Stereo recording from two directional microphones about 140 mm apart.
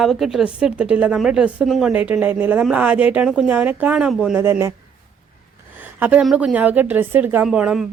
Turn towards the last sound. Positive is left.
turn(degrees=-5)  # may be behind; listen again after turning